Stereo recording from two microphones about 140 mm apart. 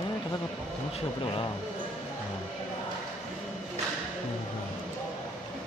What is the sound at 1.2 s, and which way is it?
Speech, 35° left (ahead or behind).